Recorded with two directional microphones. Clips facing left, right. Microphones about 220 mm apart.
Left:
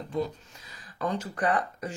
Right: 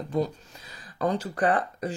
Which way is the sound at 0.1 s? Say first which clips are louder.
Right 3 dB; 35° right (ahead or behind).